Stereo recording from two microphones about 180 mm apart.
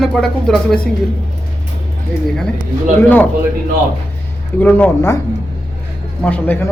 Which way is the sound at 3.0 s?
10° left (ahead or behind).